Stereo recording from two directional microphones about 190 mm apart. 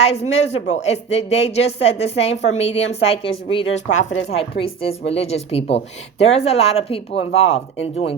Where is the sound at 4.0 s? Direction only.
90° left.